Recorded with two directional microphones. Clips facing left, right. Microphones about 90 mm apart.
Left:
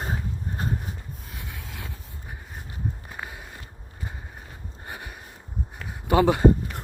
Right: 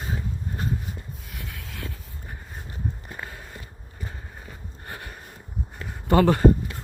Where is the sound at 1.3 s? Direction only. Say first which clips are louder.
Right 1 dB; 20° left (ahead or behind).